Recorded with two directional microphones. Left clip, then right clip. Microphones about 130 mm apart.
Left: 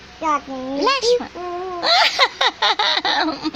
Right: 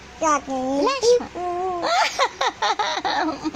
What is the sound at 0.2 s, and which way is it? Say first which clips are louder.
Speech: even; 45° right (ahead or behind).